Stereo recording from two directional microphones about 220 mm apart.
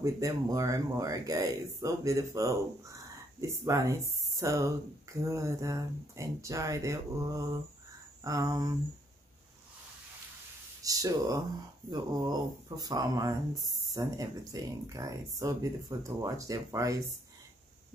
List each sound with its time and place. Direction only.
0.0 s speech: 15° right (ahead or behind)
10.8 s speech: 15° right (ahead or behind)